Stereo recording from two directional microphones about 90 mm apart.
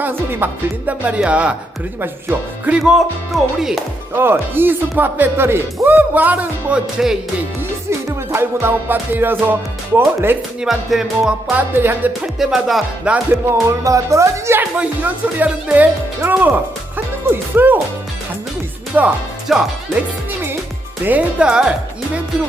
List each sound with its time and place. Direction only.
0.0 s speech: 25° right (ahead or behind)
2.6 s speech: 10° right (ahead or behind)
4.2 s speech: 25° right (ahead or behind); by 7.2 s 10° right (ahead or behind)
7.9 s speech: 30° right (ahead or behind)
10.6 s music: 5° right (ahead or behind)
11.5 s speech: 25° right (ahead or behind)
12.2 s music: 5° right (ahead or behind)
13.1 s speech: 15° right (ahead or behind)
13.5 s speech: 35° right (ahead or behind)
14.8 s speech: 20° right (ahead or behind)
19.5 s music: centre (ahead or behind)
21.0 s speech: 15° right (ahead or behind)